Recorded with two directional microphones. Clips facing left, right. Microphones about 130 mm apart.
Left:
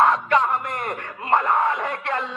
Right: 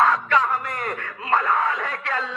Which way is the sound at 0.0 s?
20° left (ahead or behind).